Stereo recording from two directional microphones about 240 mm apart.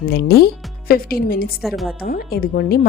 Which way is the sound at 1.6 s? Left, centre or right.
Centre.